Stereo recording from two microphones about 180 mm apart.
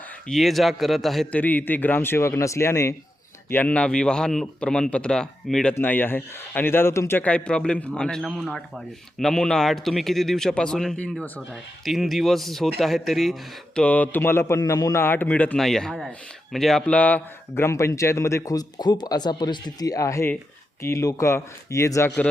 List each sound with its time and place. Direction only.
0.3 s a man's voice: centre (ahead or behind); by 22.1 s 15° left (ahead or behind)